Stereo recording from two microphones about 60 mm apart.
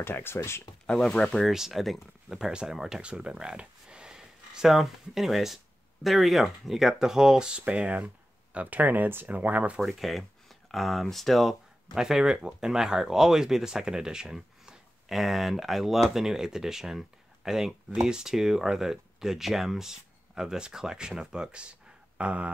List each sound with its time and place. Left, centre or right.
0.0 s speech: left
0.8 s speech: centre
1.5 s speech: centre; by 9.8 s right
9.8 s speech: centre; by 22.5 s right